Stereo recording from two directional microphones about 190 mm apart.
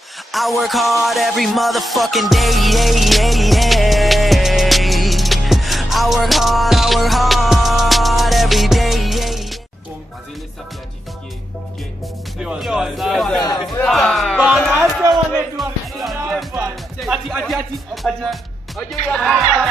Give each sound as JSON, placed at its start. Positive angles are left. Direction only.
{"t": 0.3, "sound": "music", "side_deg": 0}
{"t": 12.4, "sound": "music", "side_deg": 0}
{"t": 13.4, "sound": "a sound", "side_deg": 20}
{"t": 13.7, "sound": "a sound", "side_deg": 0}
{"t": 16.0, "sound": "music", "side_deg": 0}
{"t": 17.0, "sound": "speech", "side_deg": 0}